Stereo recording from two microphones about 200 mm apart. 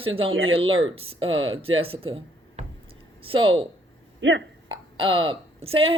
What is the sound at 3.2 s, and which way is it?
Speech, 25° right (ahead or behind).